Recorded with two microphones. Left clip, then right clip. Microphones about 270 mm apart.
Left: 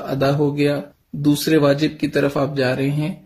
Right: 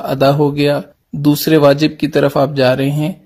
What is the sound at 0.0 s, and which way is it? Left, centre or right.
Speech, right.